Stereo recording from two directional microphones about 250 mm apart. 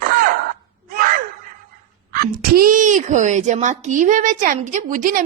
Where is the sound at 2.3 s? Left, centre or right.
Right.